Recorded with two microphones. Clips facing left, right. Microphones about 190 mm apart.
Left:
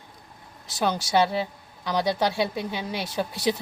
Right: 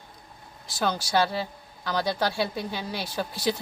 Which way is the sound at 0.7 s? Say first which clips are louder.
Left 2 dB; 20° left (ahead or behind).